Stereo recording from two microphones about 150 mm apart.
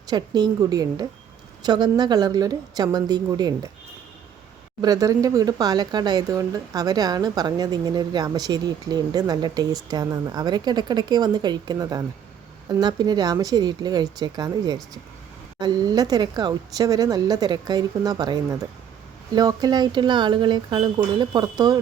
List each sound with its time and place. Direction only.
0.1 s speech: 30° right (ahead or behind)
4.8 s speech: 25° right (ahead or behind)